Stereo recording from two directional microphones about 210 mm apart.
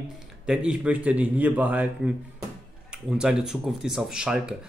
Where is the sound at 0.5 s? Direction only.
5° right (ahead or behind).